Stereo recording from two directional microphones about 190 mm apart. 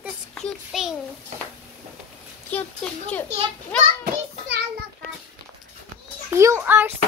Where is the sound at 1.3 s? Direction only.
40° right (ahead or behind).